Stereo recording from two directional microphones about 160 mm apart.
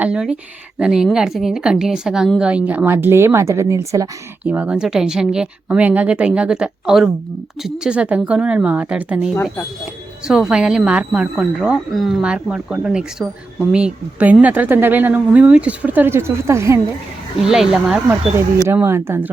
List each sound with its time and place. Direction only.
0.0 s a woman's voice: 5° right (ahead or behind)
4.4 s a woman's voice: 10° right (ahead or behind)
9.3 s speech: 15° left (ahead or behind)
10.2 s a woman's voice: 5° right (ahead or behind)
17.3 s a woman's voice: 5° right (ahead or behind)
18.7 s speech: 15° right (ahead or behind)